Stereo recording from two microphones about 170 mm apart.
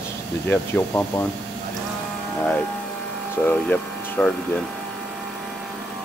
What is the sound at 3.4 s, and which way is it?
Speech, 5° left (ahead or behind).